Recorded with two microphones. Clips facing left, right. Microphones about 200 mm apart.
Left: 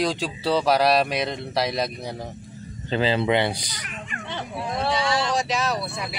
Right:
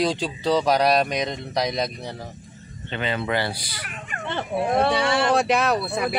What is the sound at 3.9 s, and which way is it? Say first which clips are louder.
Speech: right 3 dB; 50° right (ahead or behind).